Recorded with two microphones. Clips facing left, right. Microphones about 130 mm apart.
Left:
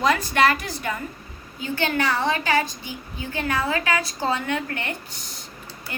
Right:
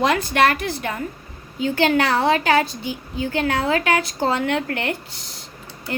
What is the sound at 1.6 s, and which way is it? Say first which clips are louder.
Speech: right 6 dB; 80° right.